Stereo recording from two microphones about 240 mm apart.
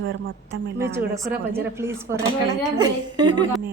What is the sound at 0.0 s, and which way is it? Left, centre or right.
Speech, right.